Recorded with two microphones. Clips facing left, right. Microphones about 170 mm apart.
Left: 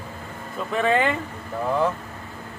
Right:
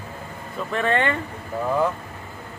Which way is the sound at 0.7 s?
Centre (ahead or behind).